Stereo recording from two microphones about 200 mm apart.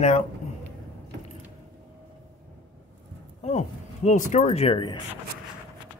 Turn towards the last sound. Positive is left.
turn(degrees=25)  # may be behind; listen again after turning